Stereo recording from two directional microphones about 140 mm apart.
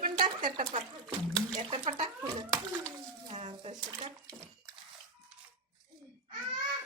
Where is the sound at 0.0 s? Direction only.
75° right (ahead or behind).